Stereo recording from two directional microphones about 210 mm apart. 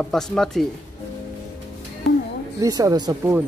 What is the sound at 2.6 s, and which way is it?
Speech, 15° right (ahead or behind).